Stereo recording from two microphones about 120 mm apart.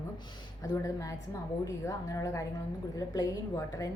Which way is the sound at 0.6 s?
25° left (ahead or behind).